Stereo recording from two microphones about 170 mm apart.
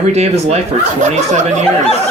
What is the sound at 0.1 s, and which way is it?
Speech, 40° right (ahead or behind).